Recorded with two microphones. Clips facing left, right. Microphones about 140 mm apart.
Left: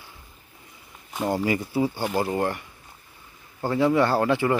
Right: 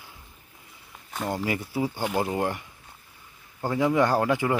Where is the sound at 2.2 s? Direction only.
10° right (ahead or behind).